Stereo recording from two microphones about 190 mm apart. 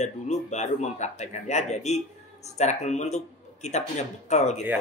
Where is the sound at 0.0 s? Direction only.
35° left (ahead or behind).